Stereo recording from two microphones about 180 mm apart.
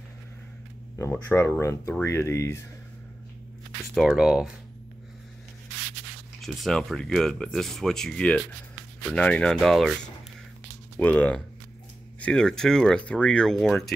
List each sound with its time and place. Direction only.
0.9 s speech: 15° left (ahead or behind)
3.9 s speech: centre (ahead or behind)
6.4 s speech: centre (ahead or behind)
11.0 s speech: 10° left (ahead or behind)